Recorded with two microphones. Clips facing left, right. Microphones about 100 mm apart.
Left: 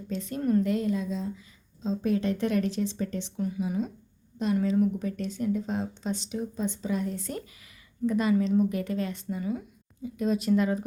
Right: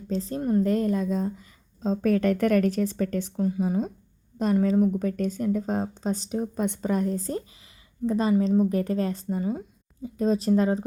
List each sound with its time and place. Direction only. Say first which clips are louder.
0.1 s a woman's voice: right 1 dB; 35° right (ahead or behind)
0.6 s speech: right 4 dB; 45° right (ahead or behind)
3.4 s speech: right 4 dB; 35° right (ahead or behind)
6.6 s speech: right 4 dB; 55° right (ahead or behind); by 10.8 s 35° right (ahead or behind)